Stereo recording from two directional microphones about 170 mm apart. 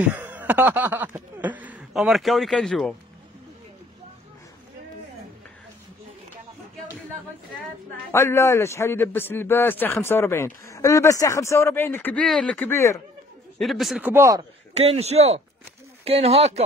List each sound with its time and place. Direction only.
0.0 s snicker: 10° right (ahead or behind)
8.1 s a man's voice: 15° left (ahead or behind)
13.6 s speech: centre (ahead or behind); by 14.4 s 15° right (ahead or behind)
14.7 s a man's voice: 40° right (ahead or behind)